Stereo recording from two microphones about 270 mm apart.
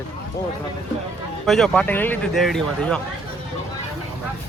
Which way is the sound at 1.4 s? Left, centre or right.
Centre.